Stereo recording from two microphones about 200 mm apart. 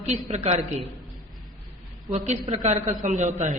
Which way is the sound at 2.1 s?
35° right (ahead or behind).